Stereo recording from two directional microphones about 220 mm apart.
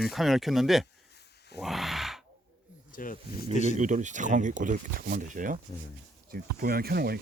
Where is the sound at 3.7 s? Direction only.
35° right (ahead or behind).